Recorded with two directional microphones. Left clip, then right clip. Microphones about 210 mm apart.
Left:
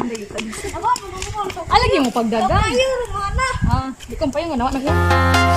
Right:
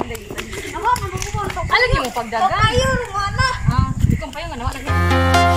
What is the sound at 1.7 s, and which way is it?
Speech, 55° left (ahead or behind).